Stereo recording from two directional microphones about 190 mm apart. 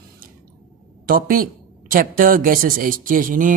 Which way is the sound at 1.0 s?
50° right (ahead or behind).